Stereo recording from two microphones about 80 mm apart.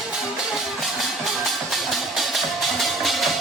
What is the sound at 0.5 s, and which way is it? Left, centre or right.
Music, centre.